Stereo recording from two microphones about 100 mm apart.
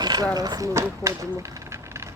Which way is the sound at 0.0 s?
40° right (ahead or behind).